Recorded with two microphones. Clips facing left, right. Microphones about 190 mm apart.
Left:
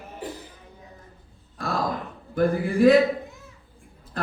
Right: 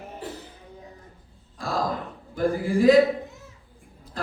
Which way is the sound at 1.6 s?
60° left (ahead or behind).